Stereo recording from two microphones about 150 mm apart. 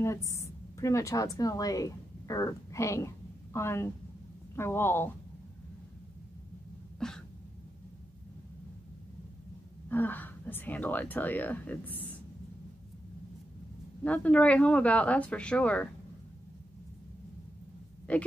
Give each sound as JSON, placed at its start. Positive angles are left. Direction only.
{"t": 0.0, "sound": "a woman's voice", "side_deg": 20}
{"t": 7.0, "sound": "a sound", "side_deg": 5}
{"t": 9.8, "sound": "speech", "side_deg": 10}
{"t": 14.0, "sound": "speech", "side_deg": 10}
{"t": 18.1, "sound": "speech", "side_deg": 10}